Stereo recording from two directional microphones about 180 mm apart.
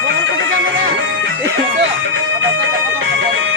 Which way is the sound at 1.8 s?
90° right.